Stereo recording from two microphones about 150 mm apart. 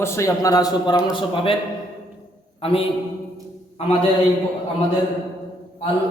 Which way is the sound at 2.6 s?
40° left (ahead or behind).